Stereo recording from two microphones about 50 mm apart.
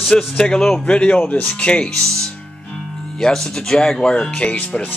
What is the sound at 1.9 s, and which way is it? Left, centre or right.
Speech, centre.